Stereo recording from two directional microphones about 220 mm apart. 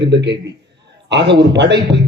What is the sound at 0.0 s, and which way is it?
A man's voice, 50° right (ahead or behind).